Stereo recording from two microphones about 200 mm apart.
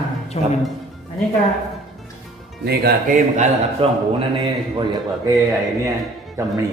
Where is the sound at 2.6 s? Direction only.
50° right (ahead or behind).